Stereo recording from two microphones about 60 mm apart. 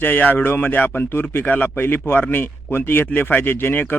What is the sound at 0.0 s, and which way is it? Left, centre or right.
Speech, left.